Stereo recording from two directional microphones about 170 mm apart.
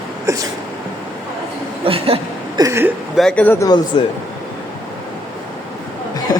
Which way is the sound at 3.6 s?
25° left (ahead or behind).